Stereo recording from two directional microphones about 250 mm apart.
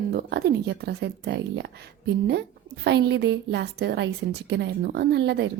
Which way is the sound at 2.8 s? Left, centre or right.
Right.